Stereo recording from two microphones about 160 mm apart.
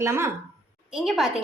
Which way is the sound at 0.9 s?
Centre (ahead or behind).